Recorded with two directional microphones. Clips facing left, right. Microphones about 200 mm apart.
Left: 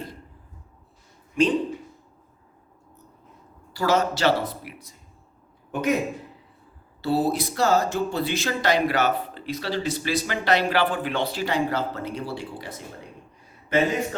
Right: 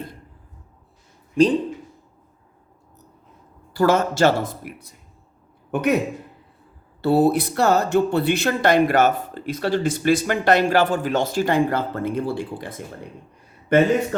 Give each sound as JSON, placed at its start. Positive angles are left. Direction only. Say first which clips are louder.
{"t": 3.8, "sound": "a man's voice", "louder": "right 5 dB", "side_deg": -50}
{"t": 7.0, "sound": "a man's voice", "louder": "right 6 dB", "side_deg": -55}